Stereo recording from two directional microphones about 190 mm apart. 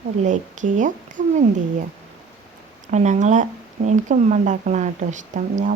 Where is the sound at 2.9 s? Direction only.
40° right (ahead or behind).